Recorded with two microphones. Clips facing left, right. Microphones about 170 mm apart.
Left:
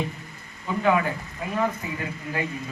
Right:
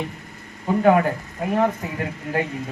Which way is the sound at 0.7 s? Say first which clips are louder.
Right 6 dB; 45° right (ahead or behind).